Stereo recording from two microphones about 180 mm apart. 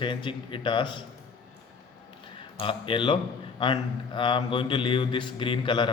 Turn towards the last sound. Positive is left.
turn(degrees=25)  # may be behind; listen again after turning